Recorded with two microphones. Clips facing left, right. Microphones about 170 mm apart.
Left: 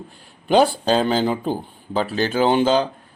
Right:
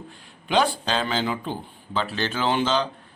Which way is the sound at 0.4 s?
40° left (ahead or behind).